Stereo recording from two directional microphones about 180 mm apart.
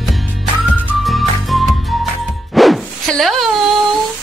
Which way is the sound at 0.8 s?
Centre (ahead or behind).